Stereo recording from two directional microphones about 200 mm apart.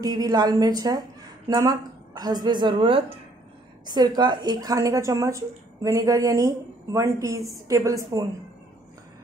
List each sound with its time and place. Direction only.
0.0 s a woman's voice: 20° right (ahead or behind)